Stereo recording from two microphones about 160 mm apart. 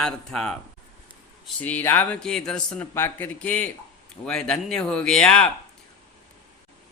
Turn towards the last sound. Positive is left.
turn(degrees=5)  # may be behind; listen again after turning